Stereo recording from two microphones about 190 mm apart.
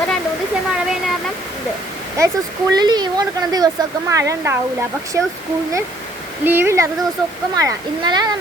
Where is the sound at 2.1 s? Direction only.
15° right (ahead or behind).